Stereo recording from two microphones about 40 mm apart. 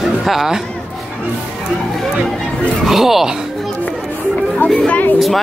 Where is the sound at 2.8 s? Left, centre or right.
Centre.